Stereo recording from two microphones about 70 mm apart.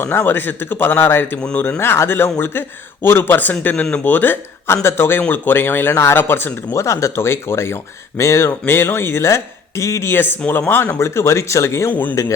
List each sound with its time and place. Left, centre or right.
0.0 s speech: left
6.1 s speech: left
6.7 s speech: left
8.6 s speech: left
10.1 s speech: left
11.9 s speech: left